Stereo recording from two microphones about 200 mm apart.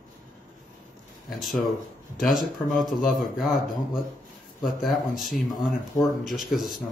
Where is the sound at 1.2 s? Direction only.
Centre (ahead or behind).